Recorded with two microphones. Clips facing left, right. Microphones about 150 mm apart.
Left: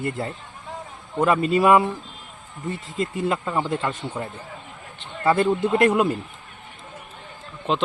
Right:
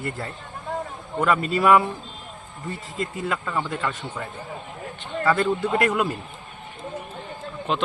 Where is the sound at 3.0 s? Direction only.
25° left (ahead or behind).